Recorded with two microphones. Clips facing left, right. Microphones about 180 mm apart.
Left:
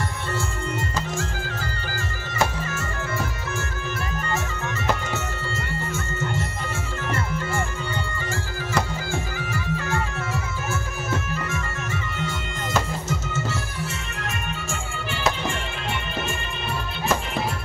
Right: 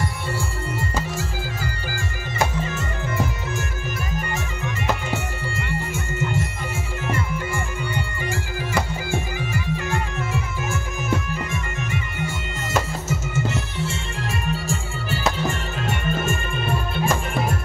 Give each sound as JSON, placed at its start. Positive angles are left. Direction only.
{"t": 0.7, "sound": "music", "side_deg": -10}
{"t": 5.9, "sound": "music", "side_deg": -10}
{"t": 9.1, "sound": "music", "side_deg": -15}
{"t": 14.5, "sound": "music", "side_deg": -40}